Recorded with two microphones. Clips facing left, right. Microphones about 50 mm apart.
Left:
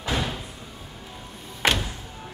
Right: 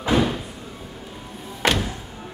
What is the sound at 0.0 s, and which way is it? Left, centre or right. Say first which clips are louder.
Slam: right 8 dB; right.